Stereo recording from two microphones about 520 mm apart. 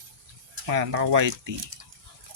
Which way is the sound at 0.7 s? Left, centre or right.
Right.